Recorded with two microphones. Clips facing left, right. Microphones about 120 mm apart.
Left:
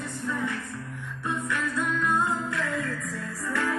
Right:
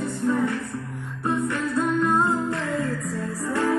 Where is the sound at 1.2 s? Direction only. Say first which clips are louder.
Right 5 dB; 35° right (ahead or behind).